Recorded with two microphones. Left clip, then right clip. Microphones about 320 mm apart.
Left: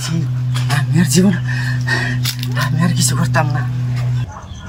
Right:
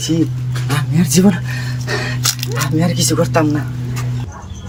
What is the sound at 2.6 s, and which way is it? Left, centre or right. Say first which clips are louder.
Speech: right 1 dB; centre.